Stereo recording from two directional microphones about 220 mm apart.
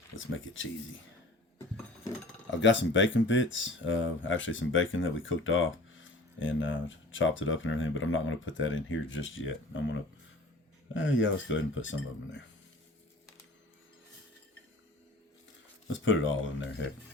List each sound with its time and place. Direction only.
0.2 s speech: 60° left (ahead or behind)
1.5 s a sound: 10° left (ahead or behind)
2.5 s speech: 55° left (ahead or behind)
15.9 s speech: 60° left (ahead or behind)